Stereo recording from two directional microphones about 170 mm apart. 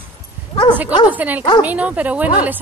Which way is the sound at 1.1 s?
10° right (ahead or behind).